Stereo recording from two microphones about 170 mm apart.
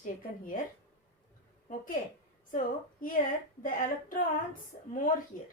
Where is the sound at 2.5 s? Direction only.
55° left (ahead or behind).